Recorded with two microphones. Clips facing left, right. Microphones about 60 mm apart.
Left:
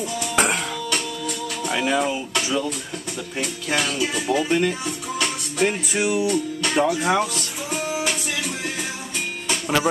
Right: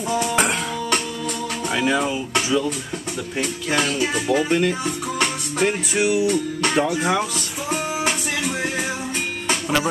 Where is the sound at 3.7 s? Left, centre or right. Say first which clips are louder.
Right 2 dB; right.